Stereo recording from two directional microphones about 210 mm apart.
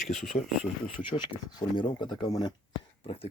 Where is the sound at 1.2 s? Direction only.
20° left (ahead or behind).